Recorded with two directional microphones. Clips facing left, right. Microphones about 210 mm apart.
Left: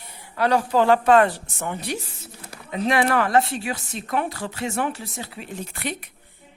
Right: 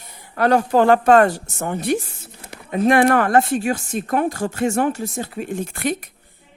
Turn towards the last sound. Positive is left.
turn(degrees=-45)  # may be behind; listen again after turning